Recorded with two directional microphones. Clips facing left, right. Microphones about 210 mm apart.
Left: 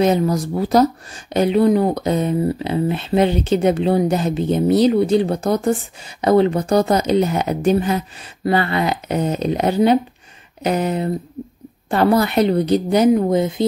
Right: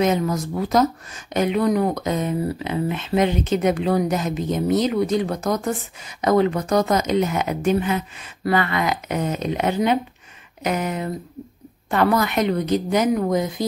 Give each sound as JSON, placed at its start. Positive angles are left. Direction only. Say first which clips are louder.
{"t": 0.0, "sound": "speech", "louder": "left 4 dB", "side_deg": 35}